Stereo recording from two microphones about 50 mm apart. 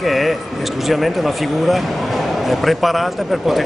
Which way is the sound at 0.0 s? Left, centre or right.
Centre.